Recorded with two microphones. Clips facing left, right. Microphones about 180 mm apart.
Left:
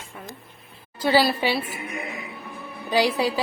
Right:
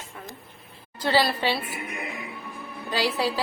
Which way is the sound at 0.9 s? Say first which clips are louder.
Left 3 dB; 10° left (ahead or behind).